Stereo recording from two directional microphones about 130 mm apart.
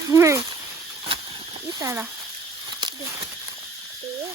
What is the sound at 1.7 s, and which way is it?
Speech, 25° right (ahead or behind).